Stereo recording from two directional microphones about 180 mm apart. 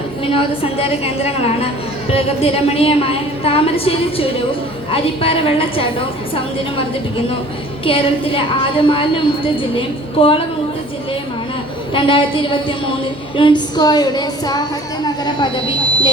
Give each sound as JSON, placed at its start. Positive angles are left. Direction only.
{"t": 0.3, "sound": "a woman's voice", "side_deg": 30}
{"t": 7.9, "sound": "a woman's voice", "side_deg": 30}
{"t": 11.9, "sound": "a woman's voice", "side_deg": 30}